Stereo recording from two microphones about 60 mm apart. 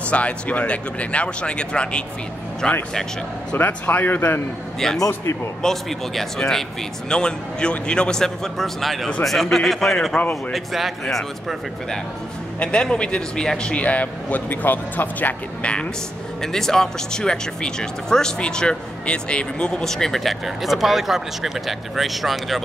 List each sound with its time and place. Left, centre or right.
0.1 s a man's voice: left
3.5 s a man's voice: left
4.7 s speech: centre
5.0 s a man's voice: left
5.6 s speech: centre
12.5 s a man's voice: centre
16.5 s speech: centre